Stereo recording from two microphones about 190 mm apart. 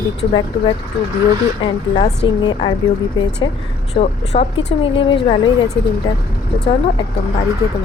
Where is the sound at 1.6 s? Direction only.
25° left (ahead or behind).